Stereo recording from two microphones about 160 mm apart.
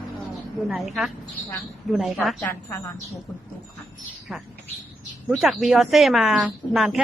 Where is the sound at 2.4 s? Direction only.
15° left (ahead or behind).